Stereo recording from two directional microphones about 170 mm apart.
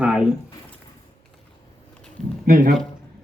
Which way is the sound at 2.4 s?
60° right (ahead or behind).